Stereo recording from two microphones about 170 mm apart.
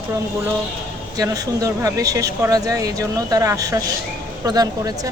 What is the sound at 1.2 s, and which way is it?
Speech, 20° right (ahead or behind).